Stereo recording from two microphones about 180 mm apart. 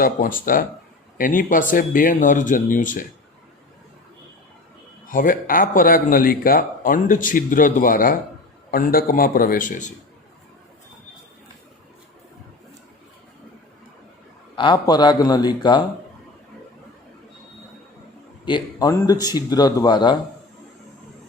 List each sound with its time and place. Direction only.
0.0 s speech: 50° left (ahead or behind)
5.0 s speech: 50° left (ahead or behind)
14.5 s speech: 25° left (ahead or behind)
18.4 s speech: 25° left (ahead or behind)